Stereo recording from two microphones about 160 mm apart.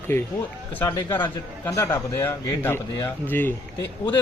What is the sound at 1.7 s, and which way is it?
A man's voice, 20° left (ahead or behind).